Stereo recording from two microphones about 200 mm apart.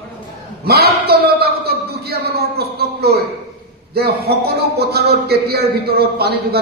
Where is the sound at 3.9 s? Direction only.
50° right (ahead or behind).